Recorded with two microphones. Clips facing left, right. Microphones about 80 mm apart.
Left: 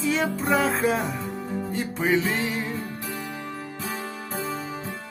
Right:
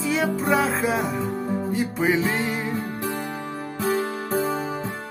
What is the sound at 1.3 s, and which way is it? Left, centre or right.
Music, right.